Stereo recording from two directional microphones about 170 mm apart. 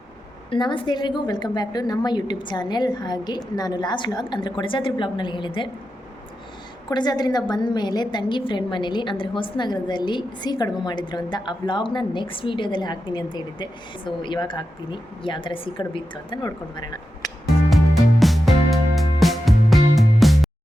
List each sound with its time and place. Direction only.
0.5 s a woman's voice: 30° left (ahead or behind)
6.9 s a woman's voice: 25° left (ahead or behind)
18.2 s music: centre (ahead or behind)